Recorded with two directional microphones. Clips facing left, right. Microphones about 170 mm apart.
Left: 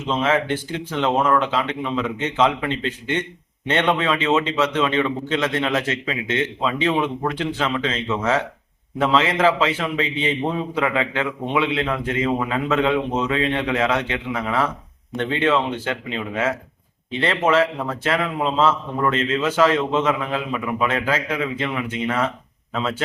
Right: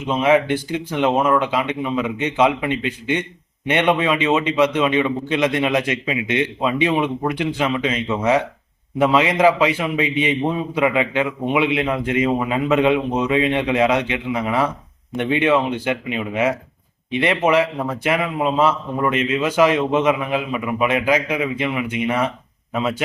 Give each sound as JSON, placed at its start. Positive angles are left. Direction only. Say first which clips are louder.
{"t": 0.1, "sound": "a man's voice", "louder": "right 4 dB", "side_deg": -10}